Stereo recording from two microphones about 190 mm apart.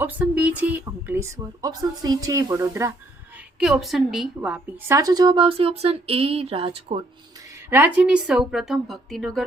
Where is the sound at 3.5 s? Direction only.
Centre (ahead or behind); by 7.0 s 30° right (ahead or behind).